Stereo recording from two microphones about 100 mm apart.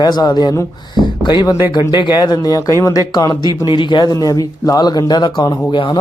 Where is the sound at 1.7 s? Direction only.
50° left (ahead or behind).